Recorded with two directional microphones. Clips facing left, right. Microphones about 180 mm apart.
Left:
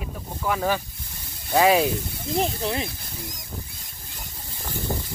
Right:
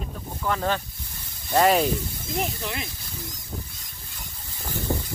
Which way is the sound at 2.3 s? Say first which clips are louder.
Left 5 dB; 35° left (ahead or behind).